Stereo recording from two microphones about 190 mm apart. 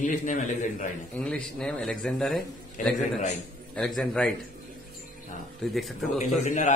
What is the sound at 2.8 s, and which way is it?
Speech, 40° left (ahead or behind).